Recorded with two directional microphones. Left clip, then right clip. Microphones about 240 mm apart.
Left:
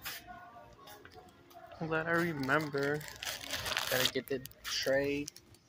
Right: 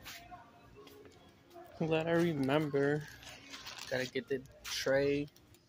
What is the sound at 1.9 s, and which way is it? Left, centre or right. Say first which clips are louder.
Speech: even; right.